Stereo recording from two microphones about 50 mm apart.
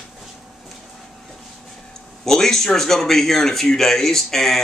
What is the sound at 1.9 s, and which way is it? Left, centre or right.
Speech, centre.